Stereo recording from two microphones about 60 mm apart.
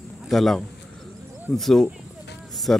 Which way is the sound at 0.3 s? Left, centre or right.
Centre.